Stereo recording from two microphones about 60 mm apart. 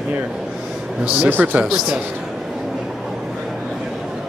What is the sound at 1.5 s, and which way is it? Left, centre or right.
Speech, centre.